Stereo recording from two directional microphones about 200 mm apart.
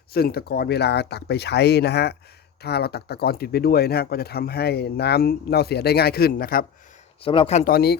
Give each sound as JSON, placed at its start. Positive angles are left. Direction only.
{"t": 0.1, "sound": "speech", "side_deg": 50}
{"t": 7.2, "sound": "speech", "side_deg": 25}
{"t": 7.7, "sound": "speech", "side_deg": 50}